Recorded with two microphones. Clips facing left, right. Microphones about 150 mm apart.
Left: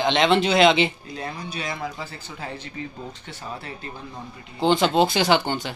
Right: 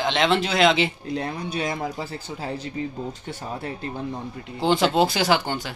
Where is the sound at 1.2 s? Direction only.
55° right (ahead or behind); by 2.6 s 35° right (ahead or behind).